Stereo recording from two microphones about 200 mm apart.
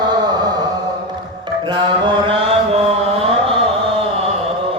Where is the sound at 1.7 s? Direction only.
25° right (ahead or behind).